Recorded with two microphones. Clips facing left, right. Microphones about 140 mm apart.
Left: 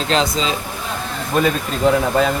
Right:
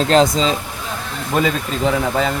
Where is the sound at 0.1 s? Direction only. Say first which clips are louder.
Right 4 dB; 40° right (ahead or behind).